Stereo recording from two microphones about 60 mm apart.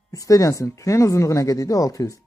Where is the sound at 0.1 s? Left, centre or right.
Left.